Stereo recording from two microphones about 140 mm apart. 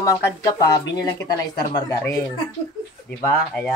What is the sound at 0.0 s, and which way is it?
Speech, 25° left (ahead or behind).